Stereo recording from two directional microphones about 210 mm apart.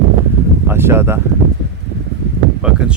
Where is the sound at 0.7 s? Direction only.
10° right (ahead or behind).